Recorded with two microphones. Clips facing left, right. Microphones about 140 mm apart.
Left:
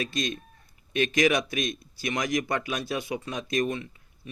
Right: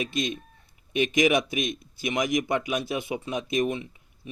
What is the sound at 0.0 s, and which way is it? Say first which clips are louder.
A man's voice: right 1 dB; 20° right (ahead or behind).